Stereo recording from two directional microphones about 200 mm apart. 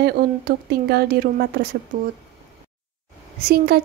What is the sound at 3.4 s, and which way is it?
Speech, 50° right (ahead or behind).